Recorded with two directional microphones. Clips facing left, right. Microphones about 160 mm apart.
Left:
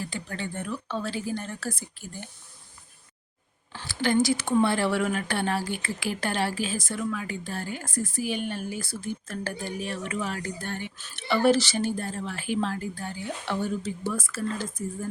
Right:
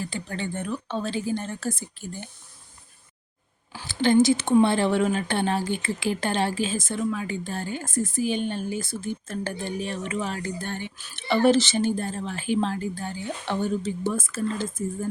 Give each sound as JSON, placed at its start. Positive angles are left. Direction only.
{"t": 0.1, "sound": "speech", "side_deg": -25}
{"t": 3.8, "sound": "speech", "side_deg": -25}